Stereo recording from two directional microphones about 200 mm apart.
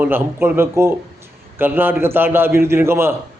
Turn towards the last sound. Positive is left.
turn(degrees=-10)  # may be behind; listen again after turning